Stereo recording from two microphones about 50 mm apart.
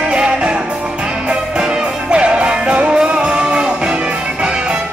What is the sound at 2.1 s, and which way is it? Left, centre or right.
Music, right.